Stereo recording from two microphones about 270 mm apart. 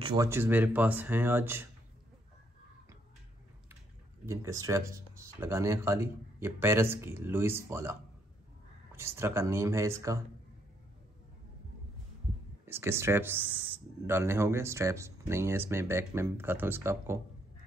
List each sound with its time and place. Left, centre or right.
0.0 s speech: centre
4.3 s speech: centre
8.9 s speech: centre
12.6 s speech: centre